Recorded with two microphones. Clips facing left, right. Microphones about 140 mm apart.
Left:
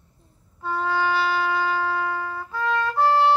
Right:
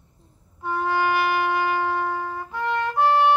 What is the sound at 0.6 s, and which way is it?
Wind instrument, 15° right (ahead or behind).